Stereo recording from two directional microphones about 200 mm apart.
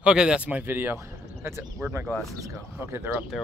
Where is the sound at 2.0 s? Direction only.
Centre (ahead or behind).